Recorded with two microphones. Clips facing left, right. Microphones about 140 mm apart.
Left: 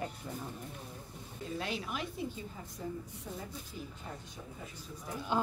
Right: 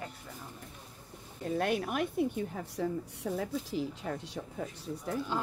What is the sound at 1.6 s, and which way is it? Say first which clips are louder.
A woman's voice: right 8 dB; 55° right (ahead or behind).